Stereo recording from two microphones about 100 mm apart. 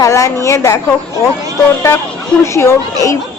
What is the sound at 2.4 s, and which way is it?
Speech, 25° left (ahead or behind).